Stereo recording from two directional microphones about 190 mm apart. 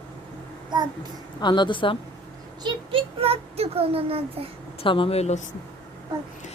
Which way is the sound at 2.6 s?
30° right (ahead or behind).